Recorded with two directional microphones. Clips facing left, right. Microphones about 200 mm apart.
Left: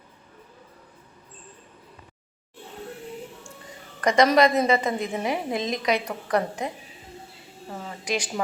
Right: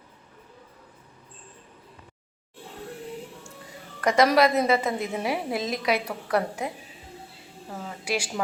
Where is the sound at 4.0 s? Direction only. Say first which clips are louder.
Left 1 dB; 5° right (ahead or behind).